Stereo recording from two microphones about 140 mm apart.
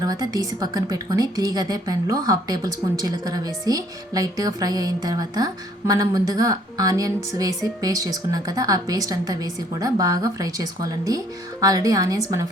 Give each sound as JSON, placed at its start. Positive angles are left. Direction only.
{"t": 0.0, "sound": "a woman's voice", "side_deg": -25}